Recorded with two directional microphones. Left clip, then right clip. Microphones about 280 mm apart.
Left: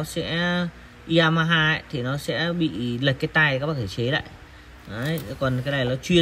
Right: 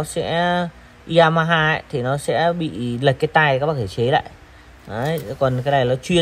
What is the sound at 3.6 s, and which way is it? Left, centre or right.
Speech, right.